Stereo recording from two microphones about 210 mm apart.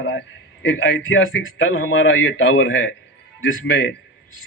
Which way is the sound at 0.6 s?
70° left (ahead or behind).